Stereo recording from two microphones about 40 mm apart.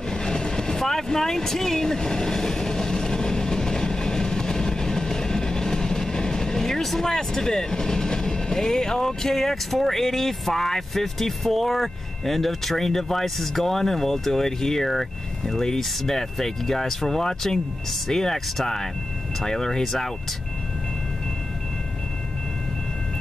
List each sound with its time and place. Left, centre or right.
0.1 s speech: centre